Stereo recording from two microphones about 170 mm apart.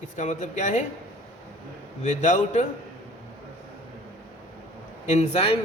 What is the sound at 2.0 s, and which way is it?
Speech, 45° left (ahead or behind).